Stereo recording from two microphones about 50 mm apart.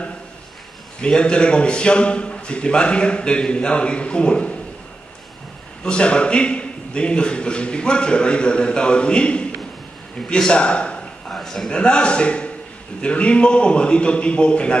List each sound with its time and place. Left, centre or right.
1.0 s a man's voice: centre
5.9 s a man's voice: left
10.5 s a sound: left
11.3 s a man's voice: centre
11.7 s a man's voice: left